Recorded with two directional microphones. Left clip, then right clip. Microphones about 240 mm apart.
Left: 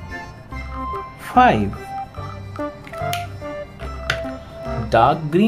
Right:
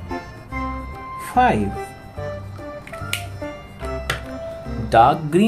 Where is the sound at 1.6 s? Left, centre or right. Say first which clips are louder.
Left 2 dB; centre.